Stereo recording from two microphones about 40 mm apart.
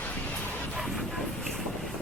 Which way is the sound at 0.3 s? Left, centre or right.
Left.